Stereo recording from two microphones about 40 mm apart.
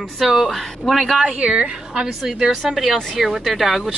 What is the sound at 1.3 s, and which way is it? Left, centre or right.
Speech, right.